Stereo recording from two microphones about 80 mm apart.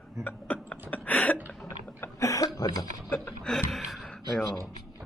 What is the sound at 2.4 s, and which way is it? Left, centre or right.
Speech, left.